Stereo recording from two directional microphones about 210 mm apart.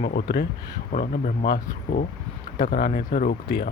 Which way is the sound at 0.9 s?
40° left (ahead or behind).